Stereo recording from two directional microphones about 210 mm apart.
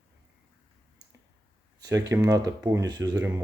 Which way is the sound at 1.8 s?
15° right (ahead or behind).